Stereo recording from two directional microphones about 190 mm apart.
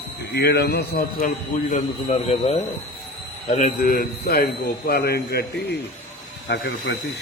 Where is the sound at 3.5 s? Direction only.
45° left (ahead or behind).